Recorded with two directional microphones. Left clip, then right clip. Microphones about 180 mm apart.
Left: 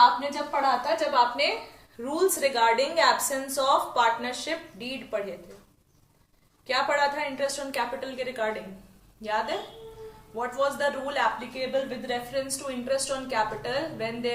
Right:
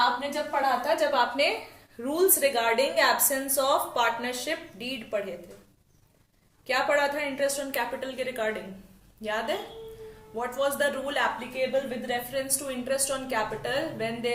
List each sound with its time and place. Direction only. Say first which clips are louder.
0.9 s a woman's voice: left 1 dB; 25° right (ahead or behind)
6.7 s a woman's voice: even; 20° right (ahead or behind)